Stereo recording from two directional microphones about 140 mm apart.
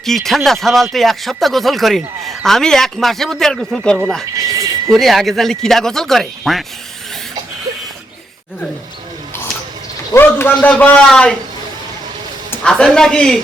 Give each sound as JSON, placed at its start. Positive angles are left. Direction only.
{"t": 0.0, "sound": "speech", "side_deg": 0}
{"t": 4.4, "sound": "a sound", "side_deg": -25}
{"t": 4.9, "sound": "speech", "side_deg": 0}
{"t": 10.1, "sound": "a man's voice", "side_deg": 15}
{"t": 12.6, "sound": "speech", "side_deg": 5}